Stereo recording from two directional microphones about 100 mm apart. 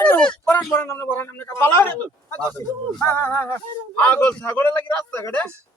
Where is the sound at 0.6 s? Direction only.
25° left (ahead or behind).